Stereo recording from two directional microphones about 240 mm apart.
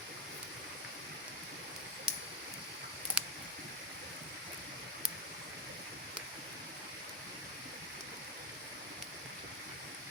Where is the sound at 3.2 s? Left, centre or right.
Centre.